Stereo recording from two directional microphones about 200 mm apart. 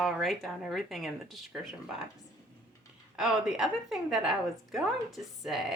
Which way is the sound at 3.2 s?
5° right (ahead or behind).